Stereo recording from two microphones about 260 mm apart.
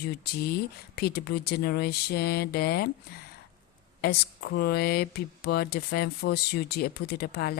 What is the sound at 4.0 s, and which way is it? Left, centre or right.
Speech, left.